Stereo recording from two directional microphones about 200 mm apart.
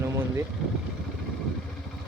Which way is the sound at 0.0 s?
15° right (ahead or behind).